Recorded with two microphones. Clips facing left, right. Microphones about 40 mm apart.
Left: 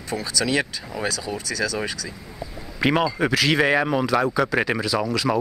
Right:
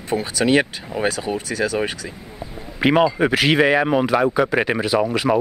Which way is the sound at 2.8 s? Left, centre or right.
Right.